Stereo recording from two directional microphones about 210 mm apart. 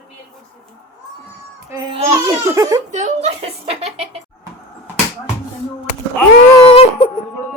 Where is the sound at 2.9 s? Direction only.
35° right (ahead or behind).